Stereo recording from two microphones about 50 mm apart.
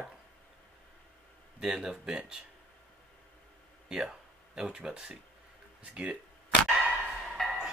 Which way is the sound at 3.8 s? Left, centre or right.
Centre.